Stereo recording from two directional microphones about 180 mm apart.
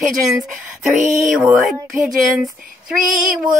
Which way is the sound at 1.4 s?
5° right (ahead or behind).